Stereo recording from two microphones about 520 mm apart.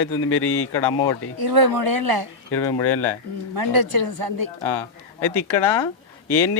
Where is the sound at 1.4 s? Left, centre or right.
Right.